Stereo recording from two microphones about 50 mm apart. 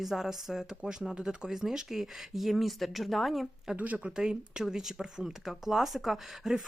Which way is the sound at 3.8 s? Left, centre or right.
Right.